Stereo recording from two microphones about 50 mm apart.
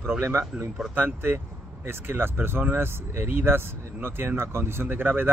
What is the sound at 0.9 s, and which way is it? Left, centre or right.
Speech, right.